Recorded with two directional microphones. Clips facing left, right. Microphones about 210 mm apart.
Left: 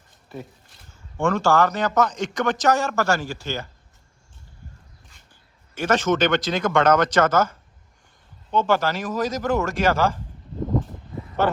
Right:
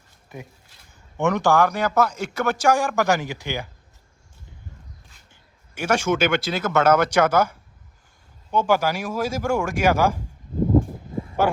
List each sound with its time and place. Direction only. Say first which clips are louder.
1.2 s speech: even; 15° right (ahead or behind)
5.7 s speech: left 1 dB; 10° right (ahead or behind)
10.6 s a sound: right 6 dB; 15° right (ahead or behind)